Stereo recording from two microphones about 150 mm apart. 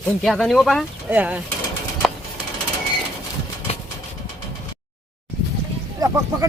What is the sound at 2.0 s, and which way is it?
Music, centre (ahead or behind).